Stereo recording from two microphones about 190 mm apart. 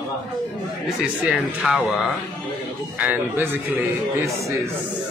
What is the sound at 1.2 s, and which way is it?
Speech, 5° right (ahead or behind).